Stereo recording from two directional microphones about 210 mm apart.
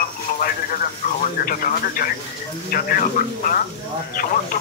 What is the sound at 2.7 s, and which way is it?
Speech, 40° left (ahead or behind).